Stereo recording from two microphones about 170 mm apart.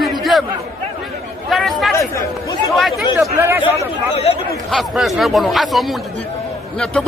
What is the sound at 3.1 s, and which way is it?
Speech, 15° right (ahead or behind).